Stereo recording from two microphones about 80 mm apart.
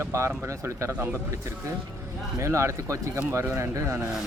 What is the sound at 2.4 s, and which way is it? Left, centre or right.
Speech, right.